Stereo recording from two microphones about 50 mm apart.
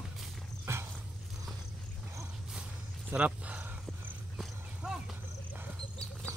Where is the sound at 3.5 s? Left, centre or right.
Right.